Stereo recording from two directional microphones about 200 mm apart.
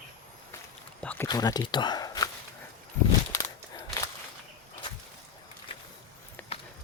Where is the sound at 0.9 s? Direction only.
10° left (ahead or behind).